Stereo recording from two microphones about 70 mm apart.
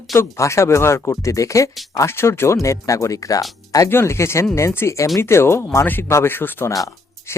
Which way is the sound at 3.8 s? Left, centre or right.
Left.